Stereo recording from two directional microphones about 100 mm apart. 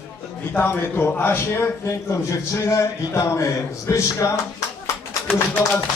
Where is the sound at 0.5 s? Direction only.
20° left (ahead or behind).